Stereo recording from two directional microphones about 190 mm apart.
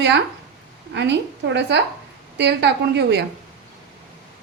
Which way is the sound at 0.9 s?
65° right (ahead or behind).